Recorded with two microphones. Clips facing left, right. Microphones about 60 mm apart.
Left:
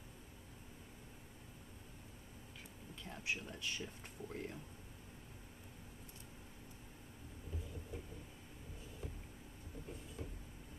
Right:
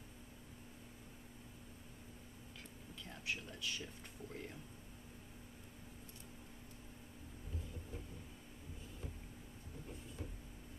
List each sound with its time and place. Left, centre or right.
3.0 s air conditioning: left
3.5 s speech: left
3.8 s speech: centre